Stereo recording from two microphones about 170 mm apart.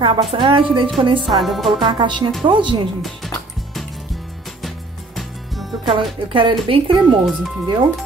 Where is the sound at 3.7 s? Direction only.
Centre (ahead or behind).